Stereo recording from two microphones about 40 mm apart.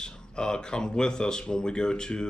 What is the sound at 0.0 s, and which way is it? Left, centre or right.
Speech, centre.